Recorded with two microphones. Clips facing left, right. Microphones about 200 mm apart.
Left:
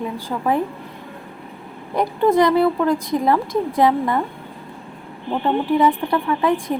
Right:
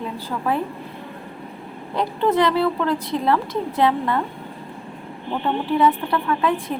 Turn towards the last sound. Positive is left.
turn(degrees=15)  # may be behind; listen again after turning